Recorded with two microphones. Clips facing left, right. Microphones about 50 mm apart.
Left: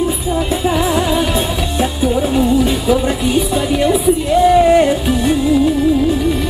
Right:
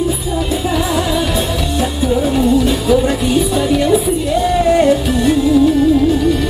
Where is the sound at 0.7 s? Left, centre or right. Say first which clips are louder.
Left 3 dB; left.